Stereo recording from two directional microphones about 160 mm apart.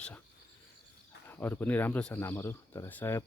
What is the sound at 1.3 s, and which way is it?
Speech, 10° left (ahead or behind).